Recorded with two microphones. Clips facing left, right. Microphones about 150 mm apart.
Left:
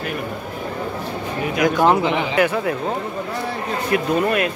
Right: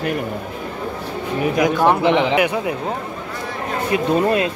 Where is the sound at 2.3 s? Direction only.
15° right (ahead or behind).